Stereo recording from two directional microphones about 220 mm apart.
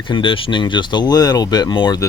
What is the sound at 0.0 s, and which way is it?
Speech, 20° left (ahead or behind).